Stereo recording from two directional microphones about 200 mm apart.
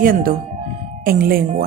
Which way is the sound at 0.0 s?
45° right (ahead or behind).